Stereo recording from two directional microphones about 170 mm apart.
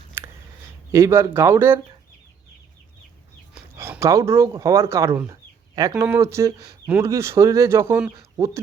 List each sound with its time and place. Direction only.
0.9 s speech: 15° right (ahead or behind)
3.5 s speech: 10° right (ahead or behind)